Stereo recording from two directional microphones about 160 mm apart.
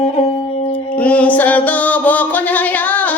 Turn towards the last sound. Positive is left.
turn(degrees=10)  # may be behind; listen again after turning